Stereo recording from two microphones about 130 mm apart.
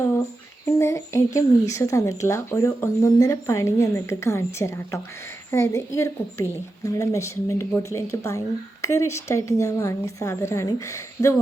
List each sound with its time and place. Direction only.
0.6 s speech: 20° left (ahead or behind)